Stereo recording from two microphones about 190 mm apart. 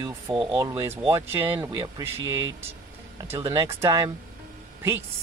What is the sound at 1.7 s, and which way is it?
Speech, 20° right (ahead or behind).